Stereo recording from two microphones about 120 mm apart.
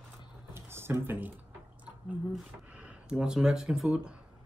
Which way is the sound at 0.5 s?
20° right (ahead or behind).